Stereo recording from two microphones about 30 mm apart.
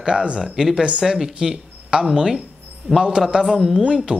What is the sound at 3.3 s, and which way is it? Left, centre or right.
Speech, centre.